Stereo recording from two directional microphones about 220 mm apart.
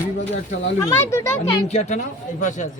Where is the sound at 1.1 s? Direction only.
10° left (ahead or behind).